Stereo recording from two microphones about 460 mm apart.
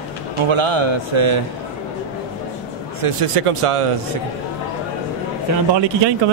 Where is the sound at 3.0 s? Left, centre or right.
Right.